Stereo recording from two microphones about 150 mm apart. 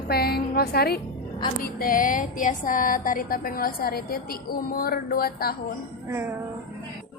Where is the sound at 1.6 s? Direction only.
75° left (ahead or behind); by 5.5 s 90° left.